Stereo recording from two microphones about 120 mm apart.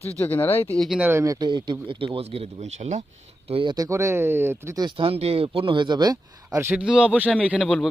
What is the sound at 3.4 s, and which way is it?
Speech, 50° right (ahead or behind).